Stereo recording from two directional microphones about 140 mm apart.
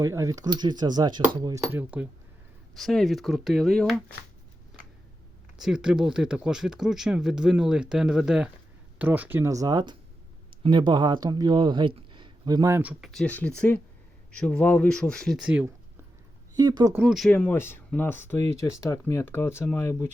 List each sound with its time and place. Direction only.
0.0 s speech: 20° right (ahead or behind)
1.8 s speech: 10° right (ahead or behind)
2.7 s speech: centre (ahead or behind)
5.5 s speech: 5° right (ahead or behind)
13.1 s speech: 5° left (ahead or behind)
15.4 s speech: 10° right (ahead or behind)
16.6 s speech: 30° right (ahead or behind)
16.9 s speech: 10° right (ahead or behind)
17.2 s speech: 10° left (ahead or behind)